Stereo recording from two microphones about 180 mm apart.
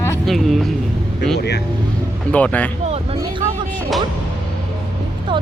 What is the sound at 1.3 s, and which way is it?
Speech, 65° left (ahead or behind).